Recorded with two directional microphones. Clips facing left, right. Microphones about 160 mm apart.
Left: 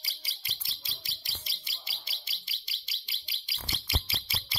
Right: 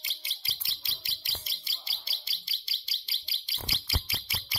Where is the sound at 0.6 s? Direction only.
65° right (ahead or behind).